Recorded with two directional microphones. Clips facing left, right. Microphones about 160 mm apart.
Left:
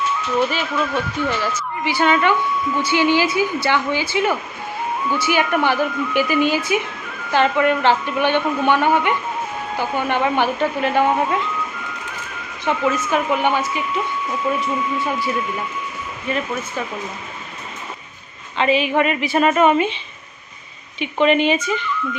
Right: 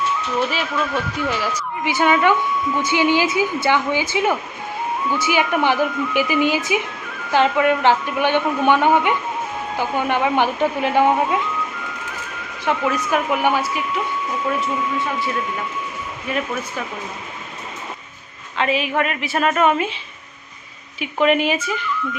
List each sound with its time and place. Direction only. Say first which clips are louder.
0.5 s a woman's voice: left 1 dB; centre (ahead or behind)
12.6 s a woman's voice: left 1 dB; centre (ahead or behind)
18.5 s a woman's voice: left 3 dB; centre (ahead or behind)
21.0 s a woman's voice: left 1 dB; 5° right (ahead or behind)